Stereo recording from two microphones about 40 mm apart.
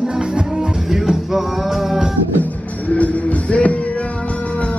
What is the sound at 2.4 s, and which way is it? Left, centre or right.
Music, left.